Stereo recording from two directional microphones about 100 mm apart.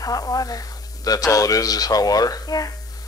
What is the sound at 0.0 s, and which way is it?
Speech, 35° left (ahead or behind).